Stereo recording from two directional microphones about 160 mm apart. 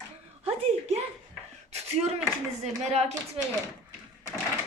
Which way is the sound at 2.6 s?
40° right (ahead or behind).